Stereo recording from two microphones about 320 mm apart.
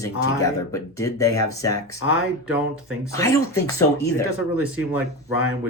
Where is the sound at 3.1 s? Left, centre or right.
Centre.